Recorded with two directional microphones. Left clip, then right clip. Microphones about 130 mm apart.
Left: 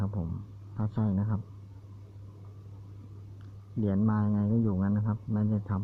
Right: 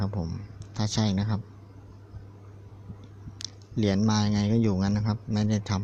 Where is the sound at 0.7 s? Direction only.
90° right.